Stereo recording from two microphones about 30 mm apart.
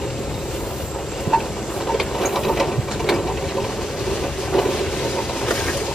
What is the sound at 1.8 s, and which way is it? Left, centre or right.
Sewing machine, centre.